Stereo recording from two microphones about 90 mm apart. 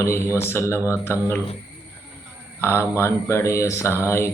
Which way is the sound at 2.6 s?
30° left (ahead or behind).